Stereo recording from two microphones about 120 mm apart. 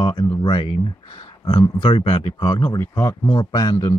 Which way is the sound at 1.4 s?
40° left (ahead or behind).